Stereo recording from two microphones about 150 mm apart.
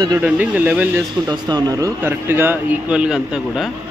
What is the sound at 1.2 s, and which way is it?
Speech, 25° right (ahead or behind).